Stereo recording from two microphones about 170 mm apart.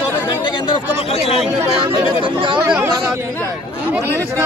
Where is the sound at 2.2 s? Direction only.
30° right (ahead or behind).